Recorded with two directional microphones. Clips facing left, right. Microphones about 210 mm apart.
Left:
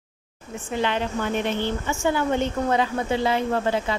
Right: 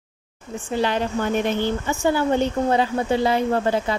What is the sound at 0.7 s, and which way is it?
A woman's voice, 35° right (ahead or behind).